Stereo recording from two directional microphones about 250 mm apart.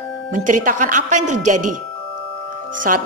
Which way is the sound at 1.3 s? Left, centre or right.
Right.